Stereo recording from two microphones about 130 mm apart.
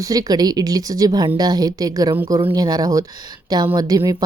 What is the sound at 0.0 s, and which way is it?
A woman's voice, 30° right (ahead or behind).